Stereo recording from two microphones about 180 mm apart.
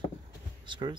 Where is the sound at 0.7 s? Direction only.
25° right (ahead or behind).